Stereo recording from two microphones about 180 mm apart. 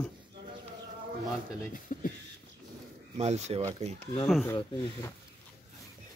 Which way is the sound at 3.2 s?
35° right (ahead or behind).